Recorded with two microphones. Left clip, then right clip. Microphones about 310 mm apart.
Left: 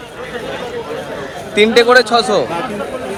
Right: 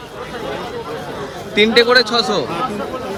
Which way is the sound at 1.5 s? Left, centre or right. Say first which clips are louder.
Left 3 dB; centre.